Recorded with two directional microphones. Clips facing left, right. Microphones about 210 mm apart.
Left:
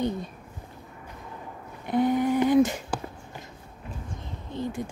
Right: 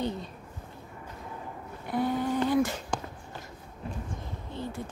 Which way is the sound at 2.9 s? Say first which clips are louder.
Left 2 dB; 5° left (ahead or behind).